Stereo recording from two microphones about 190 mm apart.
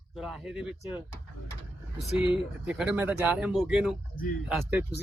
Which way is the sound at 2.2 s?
5° right (ahead or behind).